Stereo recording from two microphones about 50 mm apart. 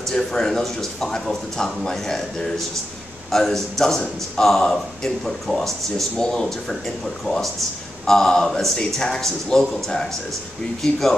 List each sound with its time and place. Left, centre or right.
0.1 s a man's voice: centre
10.8 s speech: centre